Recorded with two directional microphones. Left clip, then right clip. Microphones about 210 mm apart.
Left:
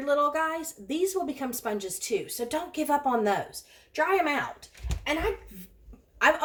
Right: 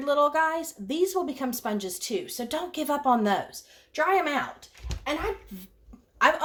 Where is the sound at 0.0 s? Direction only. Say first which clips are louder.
Right 2 dB; 30° right (ahead or behind).